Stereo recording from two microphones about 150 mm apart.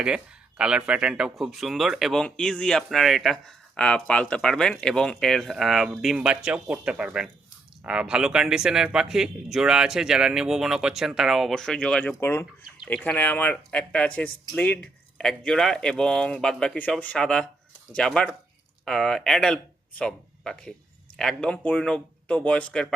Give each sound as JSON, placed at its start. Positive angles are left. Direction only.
{"t": 0.0, "sound": "speech", "side_deg": -5}